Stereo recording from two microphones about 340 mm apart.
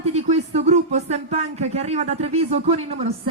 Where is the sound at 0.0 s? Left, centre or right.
Centre.